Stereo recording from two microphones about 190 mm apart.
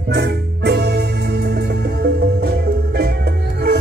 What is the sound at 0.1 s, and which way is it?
Music, 60° right (ahead or behind).